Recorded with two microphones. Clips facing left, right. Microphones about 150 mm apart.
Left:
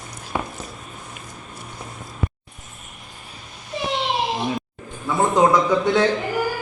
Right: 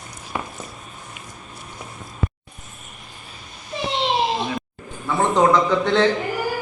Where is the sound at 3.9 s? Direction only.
25° right (ahead or behind).